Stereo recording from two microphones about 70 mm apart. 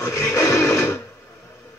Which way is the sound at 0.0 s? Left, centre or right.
Left.